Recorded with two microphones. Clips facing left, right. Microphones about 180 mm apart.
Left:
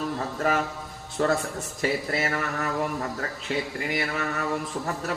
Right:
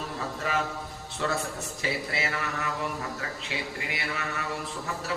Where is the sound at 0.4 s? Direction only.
45° left (ahead or behind).